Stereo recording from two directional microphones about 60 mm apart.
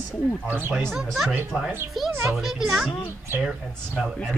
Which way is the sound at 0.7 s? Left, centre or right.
Centre.